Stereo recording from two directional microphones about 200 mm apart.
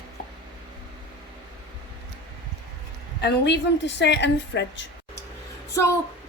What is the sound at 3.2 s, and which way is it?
A woman's voice, 55° left (ahead or behind).